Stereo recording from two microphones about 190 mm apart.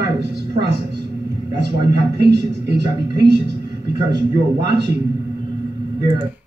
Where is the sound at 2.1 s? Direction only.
60° right (ahead or behind).